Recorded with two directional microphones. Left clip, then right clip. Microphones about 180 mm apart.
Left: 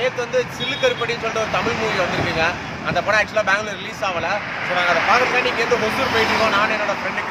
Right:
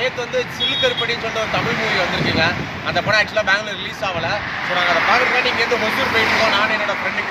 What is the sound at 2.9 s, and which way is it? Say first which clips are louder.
Speech: right 1 dB; 5° left (ahead or behind).